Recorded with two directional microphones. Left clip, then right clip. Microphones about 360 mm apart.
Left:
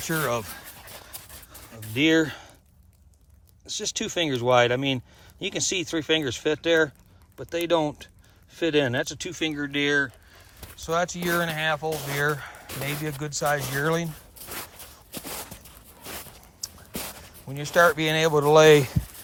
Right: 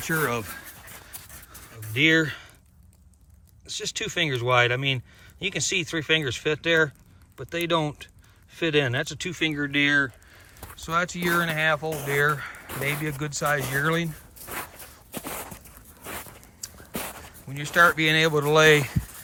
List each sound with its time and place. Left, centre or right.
0.0 s speech: centre
0.9 s dog: left
1.9 s speech: centre
3.7 s speech: centre
16.1 s a sound: centre
17.5 s speech: centre